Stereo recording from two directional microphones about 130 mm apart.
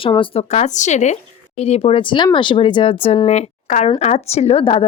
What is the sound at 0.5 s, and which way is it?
Speech, 65° left (ahead or behind).